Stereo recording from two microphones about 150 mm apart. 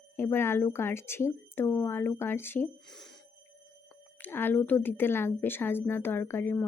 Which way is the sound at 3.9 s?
10° left (ahead or behind).